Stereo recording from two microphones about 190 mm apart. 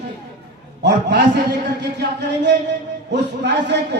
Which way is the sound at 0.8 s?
65° right (ahead or behind).